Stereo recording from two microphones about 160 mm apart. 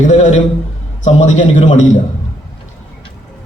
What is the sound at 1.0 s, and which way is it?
Speech, 50° left (ahead or behind).